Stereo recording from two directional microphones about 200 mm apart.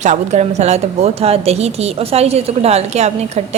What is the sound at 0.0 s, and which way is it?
A woman's voice, 35° right (ahead or behind).